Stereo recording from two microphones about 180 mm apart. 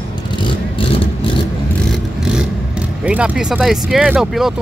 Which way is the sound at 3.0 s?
5° right (ahead or behind).